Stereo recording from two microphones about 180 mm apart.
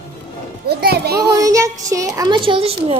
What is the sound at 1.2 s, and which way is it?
Child singing, 20° right (ahead or behind).